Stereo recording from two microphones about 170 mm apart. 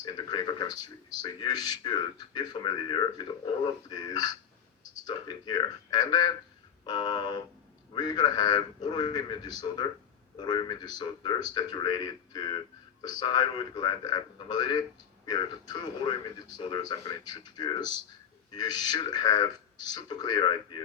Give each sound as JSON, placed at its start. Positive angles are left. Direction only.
{"t": 0.0, "sound": "speech", "side_deg": 25}